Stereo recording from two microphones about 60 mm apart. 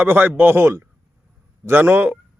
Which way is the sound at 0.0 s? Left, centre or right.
Right.